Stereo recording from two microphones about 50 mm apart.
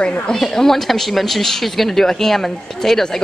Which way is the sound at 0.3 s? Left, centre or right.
Centre.